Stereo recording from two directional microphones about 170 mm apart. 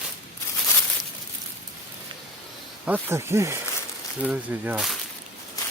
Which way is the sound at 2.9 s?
15° right (ahead or behind).